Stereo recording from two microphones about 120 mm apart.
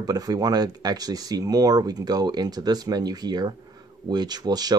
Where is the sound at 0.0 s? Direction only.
30° right (ahead or behind).